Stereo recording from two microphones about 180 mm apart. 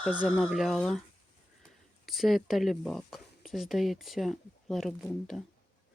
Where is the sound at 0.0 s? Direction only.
Centre (ahead or behind).